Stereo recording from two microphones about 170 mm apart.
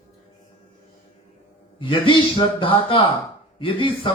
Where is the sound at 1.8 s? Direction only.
30° left (ahead or behind).